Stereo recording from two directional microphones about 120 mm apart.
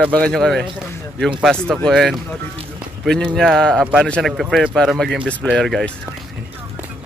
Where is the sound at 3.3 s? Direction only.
5° left (ahead or behind).